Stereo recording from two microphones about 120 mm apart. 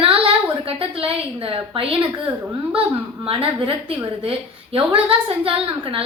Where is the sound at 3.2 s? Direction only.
50° right (ahead or behind).